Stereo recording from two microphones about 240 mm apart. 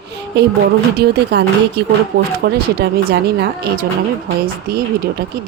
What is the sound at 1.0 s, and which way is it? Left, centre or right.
Speech, right.